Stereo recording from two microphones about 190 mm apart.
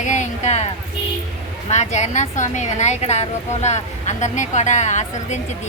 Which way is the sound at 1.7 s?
40° left (ahead or behind).